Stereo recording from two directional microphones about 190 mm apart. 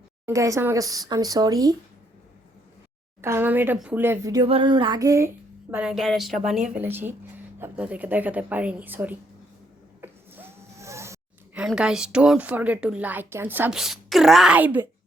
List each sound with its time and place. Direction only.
0.3 s speech: 15° right (ahead or behind)
3.2 s speech: 15° right (ahead or behind)
5.7 s a woman's voice: 5° right (ahead or behind)
10.0 s a sound: 15° right (ahead or behind)
11.6 s a woman's voice: 5° right (ahead or behind)